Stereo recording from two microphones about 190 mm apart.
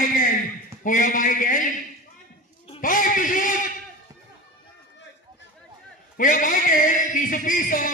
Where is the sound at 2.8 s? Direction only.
45° left (ahead or behind).